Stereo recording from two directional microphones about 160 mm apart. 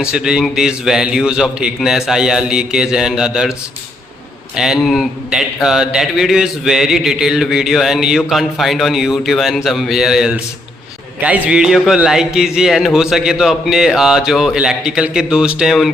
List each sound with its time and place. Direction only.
0.0 s speech: 5° right (ahead or behind)
4.5 s speech: 5° right (ahead or behind)